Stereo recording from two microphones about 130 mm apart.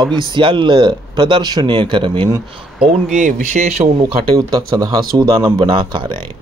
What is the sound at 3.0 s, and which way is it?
Speech, 80° right.